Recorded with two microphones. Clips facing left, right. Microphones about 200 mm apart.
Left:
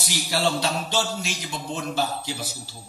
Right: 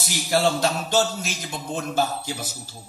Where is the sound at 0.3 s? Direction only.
45° right (ahead or behind).